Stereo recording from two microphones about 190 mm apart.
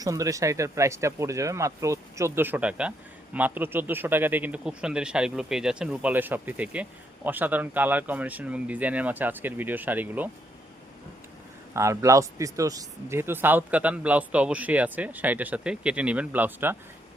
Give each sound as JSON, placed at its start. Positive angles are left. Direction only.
{"t": 0.0, "sound": "speech", "side_deg": -15}
{"t": 11.7, "sound": "speech", "side_deg": -15}